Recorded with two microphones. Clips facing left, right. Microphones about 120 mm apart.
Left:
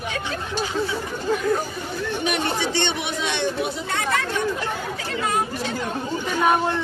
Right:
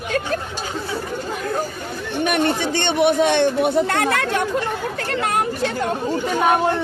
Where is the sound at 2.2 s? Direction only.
50° right (ahead or behind).